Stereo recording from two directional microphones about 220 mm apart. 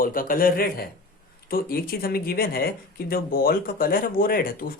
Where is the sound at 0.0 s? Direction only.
40° left (ahead or behind).